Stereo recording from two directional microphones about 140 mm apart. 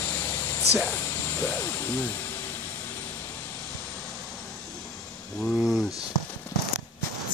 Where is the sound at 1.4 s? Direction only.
15° left (ahead or behind).